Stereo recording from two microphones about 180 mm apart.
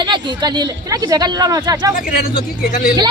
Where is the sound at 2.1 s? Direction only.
55° left (ahead or behind).